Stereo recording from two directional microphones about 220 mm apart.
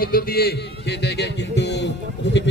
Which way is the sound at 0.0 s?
40° left (ahead or behind).